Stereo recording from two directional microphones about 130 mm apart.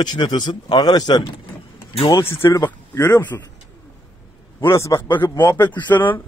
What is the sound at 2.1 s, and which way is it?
Speech, 20° left (ahead or behind).